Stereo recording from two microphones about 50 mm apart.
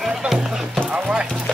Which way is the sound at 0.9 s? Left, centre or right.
Centre.